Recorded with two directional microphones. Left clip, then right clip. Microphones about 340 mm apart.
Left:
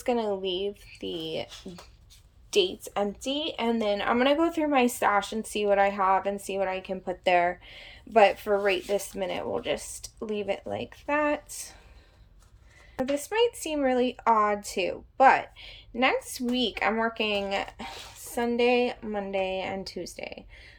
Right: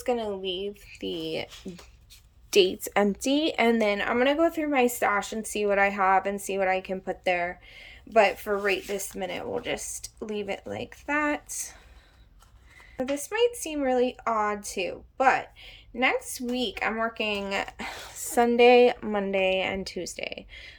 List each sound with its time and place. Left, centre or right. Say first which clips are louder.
0.0 s a woman's voice: left 1 dB; centre
3.2 s a woman's voice: right 5 dB; right
3.6 s a woman's voice: right 2 dB; centre
13.0 s a woman's voice: even; centre